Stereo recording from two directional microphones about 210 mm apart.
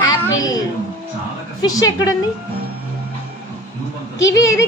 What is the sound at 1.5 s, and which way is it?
Speech, 20° left (ahead or behind).